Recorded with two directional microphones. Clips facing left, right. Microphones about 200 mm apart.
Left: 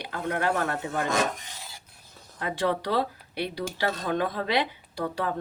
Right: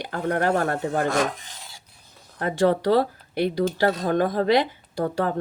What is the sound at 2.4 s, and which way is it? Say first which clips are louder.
Speech: right 7 dB; 45° right (ahead or behind).